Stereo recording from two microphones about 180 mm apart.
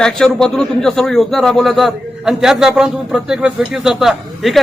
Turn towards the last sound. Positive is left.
turn(degrees=0)  # may be behind; listen again after turning